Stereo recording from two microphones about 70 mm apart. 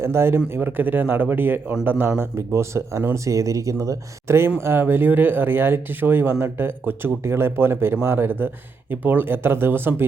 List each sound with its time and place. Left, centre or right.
0.0 s speech: right